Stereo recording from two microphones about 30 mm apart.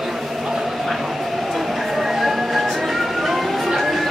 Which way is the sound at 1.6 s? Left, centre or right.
Centre.